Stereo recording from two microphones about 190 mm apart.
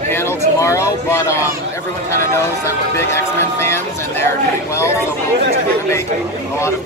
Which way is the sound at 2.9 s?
15° left (ahead or behind).